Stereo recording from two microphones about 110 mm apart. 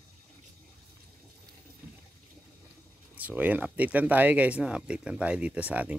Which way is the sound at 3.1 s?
15° right (ahead or behind).